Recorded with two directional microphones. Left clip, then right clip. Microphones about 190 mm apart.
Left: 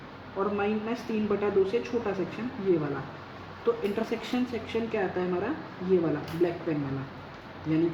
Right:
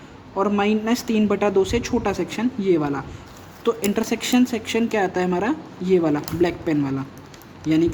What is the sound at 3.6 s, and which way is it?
A woman's voice, 50° right (ahead or behind).